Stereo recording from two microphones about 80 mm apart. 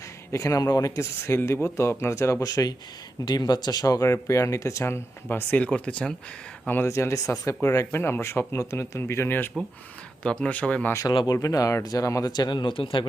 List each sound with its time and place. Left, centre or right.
0.3 s speech: left
5.5 s speech: centre
6.8 s speech: left
10.2 s speech: centre
11.4 s speech: left
12.3 s speech: left